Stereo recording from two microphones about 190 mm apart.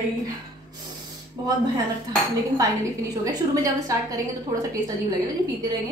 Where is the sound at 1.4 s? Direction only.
20° right (ahead or behind).